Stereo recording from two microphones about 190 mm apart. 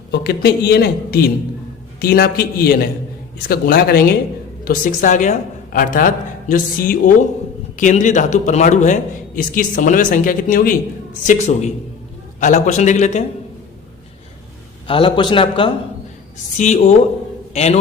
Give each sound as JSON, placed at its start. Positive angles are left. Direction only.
{"t": 0.1, "sound": "a woman's voice", "side_deg": 60}
{"t": 14.8, "sound": "a man's voice", "side_deg": 25}
{"t": 16.6, "sound": "a man's voice", "side_deg": 35}